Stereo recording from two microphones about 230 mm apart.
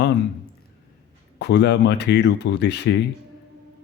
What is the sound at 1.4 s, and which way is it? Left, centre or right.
A man's voice, left.